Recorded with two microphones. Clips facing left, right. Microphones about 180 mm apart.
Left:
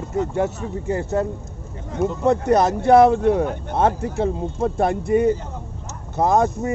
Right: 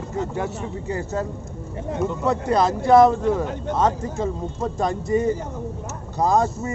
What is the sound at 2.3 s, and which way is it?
Speech, 55° left (ahead or behind).